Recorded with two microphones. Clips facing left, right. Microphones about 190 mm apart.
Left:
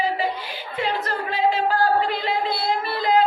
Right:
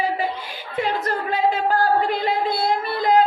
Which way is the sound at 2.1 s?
50° right (ahead or behind).